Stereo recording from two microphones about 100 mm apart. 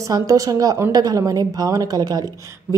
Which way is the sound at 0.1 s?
35° right (ahead or behind).